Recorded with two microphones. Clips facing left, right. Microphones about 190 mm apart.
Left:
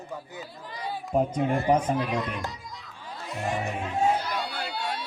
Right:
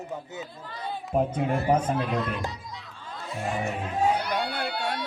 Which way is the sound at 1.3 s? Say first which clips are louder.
Left 1 dB; 5° right (ahead or behind).